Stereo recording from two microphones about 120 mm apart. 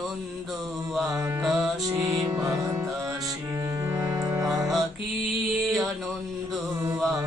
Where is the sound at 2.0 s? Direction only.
30° right (ahead or behind).